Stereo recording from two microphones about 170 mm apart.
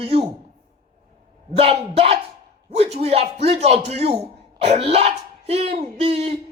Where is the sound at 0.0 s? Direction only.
35° right (ahead or behind).